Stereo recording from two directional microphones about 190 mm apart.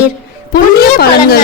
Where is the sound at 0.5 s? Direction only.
55° left (ahead or behind).